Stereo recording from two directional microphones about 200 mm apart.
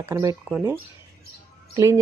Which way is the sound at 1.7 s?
15° right (ahead or behind).